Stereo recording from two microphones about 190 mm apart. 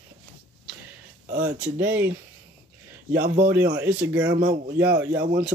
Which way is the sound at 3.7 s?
10° right (ahead or behind).